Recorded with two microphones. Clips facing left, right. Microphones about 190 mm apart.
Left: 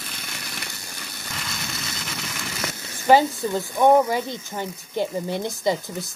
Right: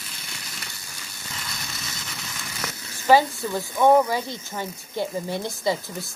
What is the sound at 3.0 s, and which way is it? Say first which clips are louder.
Speech: left 1 dB; 20° left (ahead or behind).